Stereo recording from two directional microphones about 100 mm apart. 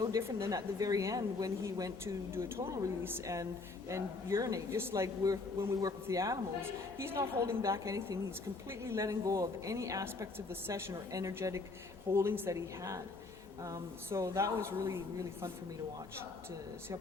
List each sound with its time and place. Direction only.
0.0 s a woman's voice: 30° right (ahead or behind)